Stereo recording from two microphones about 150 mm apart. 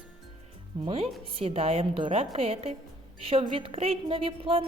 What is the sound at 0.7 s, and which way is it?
A woman's voice, 30° right (ahead or behind).